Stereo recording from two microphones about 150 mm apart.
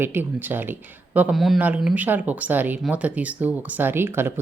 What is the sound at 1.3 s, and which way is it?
Speech, centre (ahead or behind).